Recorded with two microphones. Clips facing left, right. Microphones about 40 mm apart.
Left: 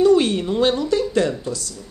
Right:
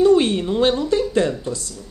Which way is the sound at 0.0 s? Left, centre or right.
Centre.